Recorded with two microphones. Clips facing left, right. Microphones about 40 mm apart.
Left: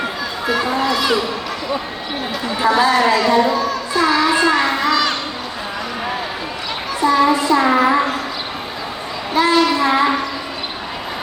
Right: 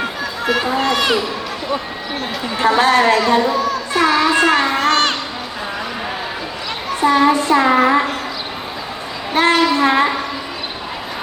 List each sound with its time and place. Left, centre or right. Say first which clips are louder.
0.4 s speech: right 1 dB; right
2.6 s child singing: right 1 dB; right
7.0 s child singing: right 1 dB; right
9.3 s a sound: right 1 dB; right